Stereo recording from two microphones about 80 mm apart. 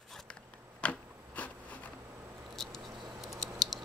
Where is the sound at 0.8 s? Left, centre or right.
Centre.